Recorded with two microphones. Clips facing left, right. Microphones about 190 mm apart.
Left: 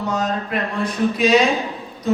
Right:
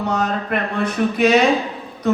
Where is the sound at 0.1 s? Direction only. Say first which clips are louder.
Right 1 dB; 60° right (ahead or behind).